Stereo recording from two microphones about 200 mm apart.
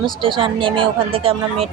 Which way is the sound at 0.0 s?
25° right (ahead or behind).